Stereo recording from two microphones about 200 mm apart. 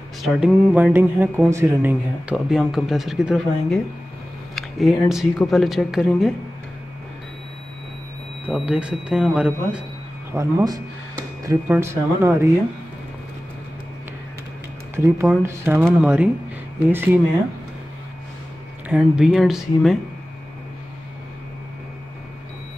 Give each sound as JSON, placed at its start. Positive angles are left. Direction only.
{"t": 0.2, "sound": "speech", "side_deg": -5}
{"t": 8.5, "sound": "speech", "side_deg": -5}
{"t": 10.3, "sound": "speech", "side_deg": -15}
{"t": 15.0, "sound": "speech", "side_deg": -15}
{"t": 18.9, "sound": "speech", "side_deg": -5}